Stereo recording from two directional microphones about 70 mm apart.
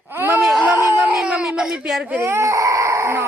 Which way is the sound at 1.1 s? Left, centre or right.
Centre.